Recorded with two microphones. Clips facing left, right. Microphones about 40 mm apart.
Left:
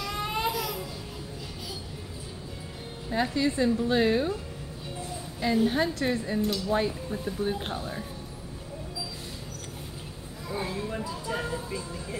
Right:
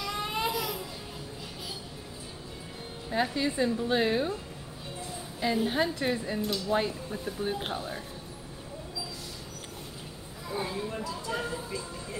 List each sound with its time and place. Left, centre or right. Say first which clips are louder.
0.0 s baby cry: left 2 dB; centre
3.1 s speech: left 2 dB; centre
5.4 s speech: left 3 dB; centre
10.5 s a sound: left 1 dB; centre
10.9 s speech: left 1 dB; centre